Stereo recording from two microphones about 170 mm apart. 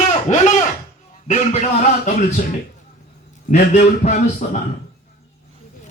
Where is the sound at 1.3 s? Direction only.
45° left (ahead or behind).